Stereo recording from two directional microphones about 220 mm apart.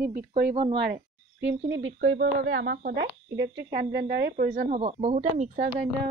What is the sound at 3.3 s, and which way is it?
Speech, 50° right (ahead or behind).